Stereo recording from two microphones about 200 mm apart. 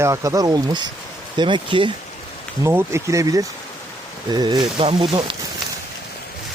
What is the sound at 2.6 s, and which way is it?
Speech, 10° right (ahead or behind).